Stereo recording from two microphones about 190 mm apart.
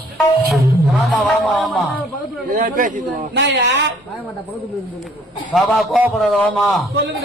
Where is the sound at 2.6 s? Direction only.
45° right (ahead or behind).